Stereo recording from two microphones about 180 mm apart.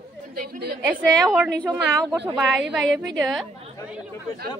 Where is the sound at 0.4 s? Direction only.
65° right (ahead or behind).